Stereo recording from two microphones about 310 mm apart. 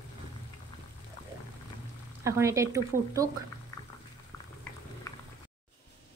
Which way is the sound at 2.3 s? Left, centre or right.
Centre.